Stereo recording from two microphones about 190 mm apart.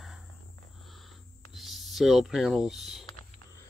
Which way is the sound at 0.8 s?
Centre (ahead or behind).